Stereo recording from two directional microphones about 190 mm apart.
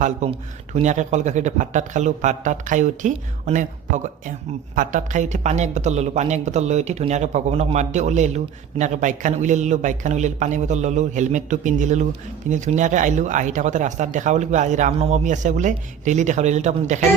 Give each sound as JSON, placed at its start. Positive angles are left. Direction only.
{"t": 0.0, "sound": "speech", "side_deg": -40}